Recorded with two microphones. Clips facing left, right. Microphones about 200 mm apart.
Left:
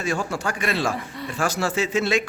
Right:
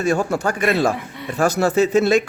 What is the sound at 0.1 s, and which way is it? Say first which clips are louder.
Speech: right 6 dB; 60° right (ahead or behind).